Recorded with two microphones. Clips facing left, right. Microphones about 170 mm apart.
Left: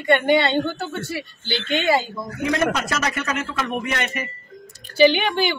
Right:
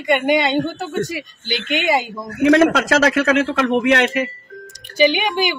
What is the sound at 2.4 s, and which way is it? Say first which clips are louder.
A man's voice: right 9 dB; 85° right.